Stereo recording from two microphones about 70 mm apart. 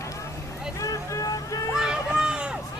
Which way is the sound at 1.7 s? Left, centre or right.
Centre.